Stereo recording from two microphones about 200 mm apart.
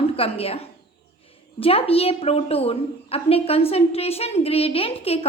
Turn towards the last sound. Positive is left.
turn(degrees=30)  # may be behind; listen again after turning